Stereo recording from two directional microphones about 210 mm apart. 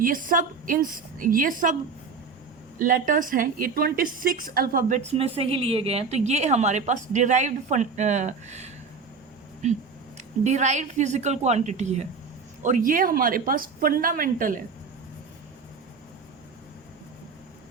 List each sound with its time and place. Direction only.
0.0 s a woman's voice: 40° right (ahead or behind)
2.7 s a woman's voice: 40° right (ahead or behind)